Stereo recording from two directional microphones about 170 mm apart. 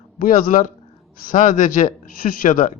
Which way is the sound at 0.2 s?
55° left (ahead or behind).